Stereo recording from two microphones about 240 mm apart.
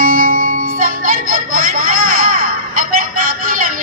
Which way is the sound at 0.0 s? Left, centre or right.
Right.